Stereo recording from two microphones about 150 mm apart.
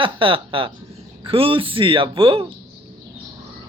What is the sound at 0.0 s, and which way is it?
Speech, 35° right (ahead or behind).